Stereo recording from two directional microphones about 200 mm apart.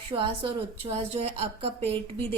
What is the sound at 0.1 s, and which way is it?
A woman's voice, 25° right (ahead or behind).